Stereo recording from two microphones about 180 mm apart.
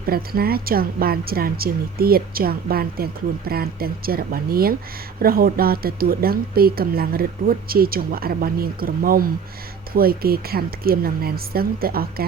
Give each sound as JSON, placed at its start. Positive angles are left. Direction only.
{"t": 0.0, "sound": "a woman's voice", "side_deg": -55}